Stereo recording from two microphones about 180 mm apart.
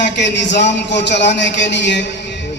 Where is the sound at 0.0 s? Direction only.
75° left (ahead or behind).